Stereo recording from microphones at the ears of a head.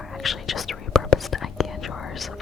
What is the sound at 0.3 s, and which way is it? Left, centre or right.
Whispering, left.